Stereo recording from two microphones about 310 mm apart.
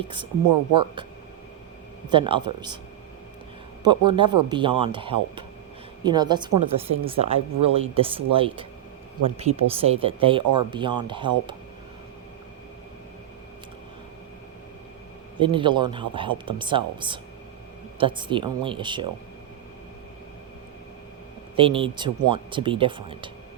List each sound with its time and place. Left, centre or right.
0.4 s speech: right
2.0 s speech: centre
3.8 s speech: centre
15.4 s speech: centre
21.5 s speech: centre